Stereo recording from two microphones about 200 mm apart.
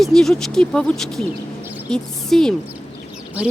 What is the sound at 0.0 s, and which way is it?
Speech, centre (ahead or behind).